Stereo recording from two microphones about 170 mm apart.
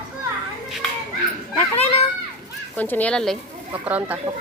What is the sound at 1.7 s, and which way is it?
Children playing, 35° left (ahead or behind).